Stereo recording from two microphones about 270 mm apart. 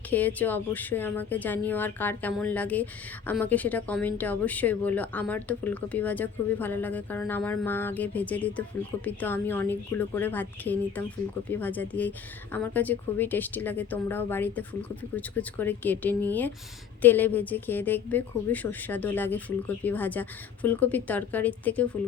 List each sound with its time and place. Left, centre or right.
0.1 s speech: centre